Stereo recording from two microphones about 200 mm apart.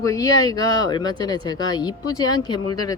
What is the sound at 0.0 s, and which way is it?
Speech, 15° left (ahead or behind).